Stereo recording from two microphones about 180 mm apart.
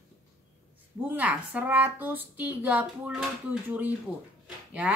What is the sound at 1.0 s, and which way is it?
A woman's voice, 10° right (ahead or behind).